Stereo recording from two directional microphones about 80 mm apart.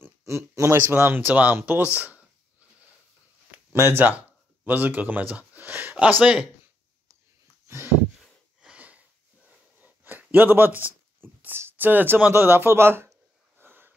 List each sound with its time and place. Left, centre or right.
0.0 s speech: right
3.7 s speech: right
7.6 s a sound: right
8.5 s wheeze: centre
9.8 s a sound: right
10.3 s speech: right
13.6 s sniff: right